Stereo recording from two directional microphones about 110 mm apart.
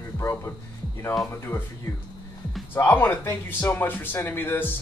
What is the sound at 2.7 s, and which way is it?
A man's voice, 20° left (ahead or behind).